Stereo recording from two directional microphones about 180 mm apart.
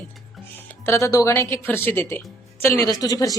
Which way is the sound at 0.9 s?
15° left (ahead or behind).